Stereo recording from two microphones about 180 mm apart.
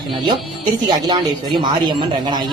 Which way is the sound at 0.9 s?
25° right (ahead or behind).